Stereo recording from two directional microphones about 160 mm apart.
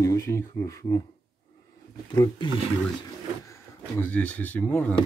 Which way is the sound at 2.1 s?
30° left (ahead or behind).